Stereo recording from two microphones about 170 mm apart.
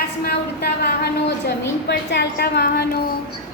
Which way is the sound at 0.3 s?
65° left (ahead or behind).